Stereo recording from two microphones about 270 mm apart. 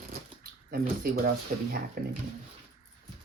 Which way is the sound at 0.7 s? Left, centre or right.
Right.